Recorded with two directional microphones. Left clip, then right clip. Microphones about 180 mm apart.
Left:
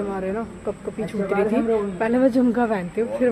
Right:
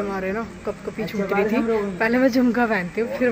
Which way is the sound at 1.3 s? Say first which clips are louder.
Even; 40° right (ahead or behind).